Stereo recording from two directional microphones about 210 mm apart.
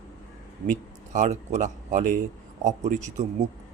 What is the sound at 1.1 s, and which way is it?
Speech, 35° right (ahead or behind).